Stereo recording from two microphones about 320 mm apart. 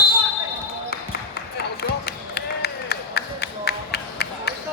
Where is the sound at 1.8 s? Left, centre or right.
Left.